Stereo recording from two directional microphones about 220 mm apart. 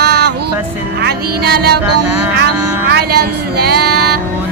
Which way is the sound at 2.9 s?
45° right (ahead or behind).